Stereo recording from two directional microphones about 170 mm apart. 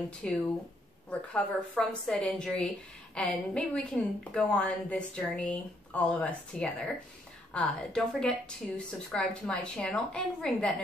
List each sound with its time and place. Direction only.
0.2 s a woman's voice: 5° left (ahead or behind)